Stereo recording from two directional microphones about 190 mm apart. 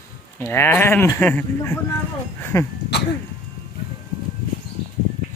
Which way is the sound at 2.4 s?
15° left (ahead or behind).